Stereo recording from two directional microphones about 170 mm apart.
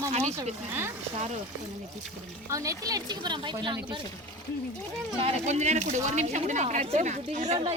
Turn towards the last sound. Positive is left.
turn(degrees=-40)  # may be behind; listen again after turning